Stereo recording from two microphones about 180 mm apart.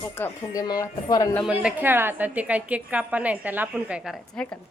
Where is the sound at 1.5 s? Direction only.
10° right (ahead or behind).